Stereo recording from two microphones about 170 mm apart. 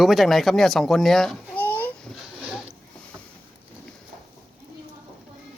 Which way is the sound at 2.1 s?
5° right (ahead or behind).